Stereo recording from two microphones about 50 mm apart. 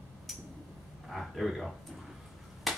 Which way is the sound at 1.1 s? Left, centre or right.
Centre.